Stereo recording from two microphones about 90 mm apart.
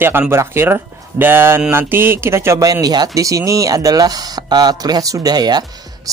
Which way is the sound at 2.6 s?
45° right (ahead or behind).